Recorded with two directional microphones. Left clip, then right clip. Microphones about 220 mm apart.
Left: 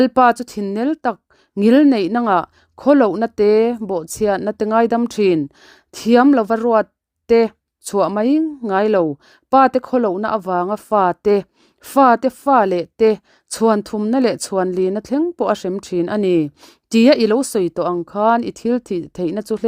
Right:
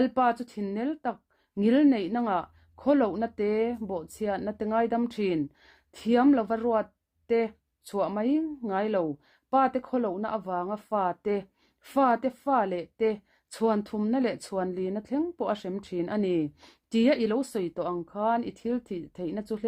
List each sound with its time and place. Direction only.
0.0 s speech: 50° left (ahead or behind)